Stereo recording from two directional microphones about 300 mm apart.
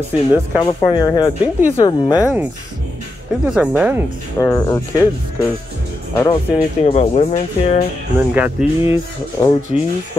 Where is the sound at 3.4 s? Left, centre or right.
Centre.